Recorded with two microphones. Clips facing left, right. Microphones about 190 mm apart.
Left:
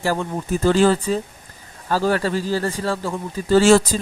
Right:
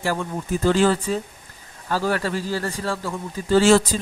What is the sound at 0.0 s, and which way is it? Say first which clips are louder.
A man's voice: left 3 dB; 30° left (ahead or behind).